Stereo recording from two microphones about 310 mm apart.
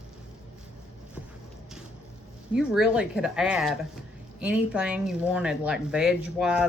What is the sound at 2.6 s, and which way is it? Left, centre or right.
Speech, centre.